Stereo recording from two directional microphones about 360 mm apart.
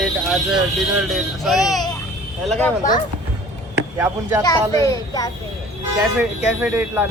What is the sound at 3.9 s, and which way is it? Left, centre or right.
Speech, centre.